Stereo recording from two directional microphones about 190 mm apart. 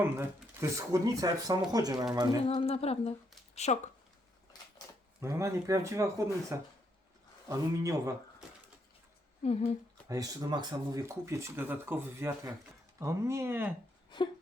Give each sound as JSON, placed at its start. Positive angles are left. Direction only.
{"t": 0.0, "sound": "speech", "side_deg": -15}
{"t": 2.4, "sound": "speech", "side_deg": 30}
{"t": 5.2, "sound": "speech", "side_deg": -15}
{"t": 9.4, "sound": "speech", "side_deg": 35}
{"t": 10.1, "sound": "speech", "side_deg": -20}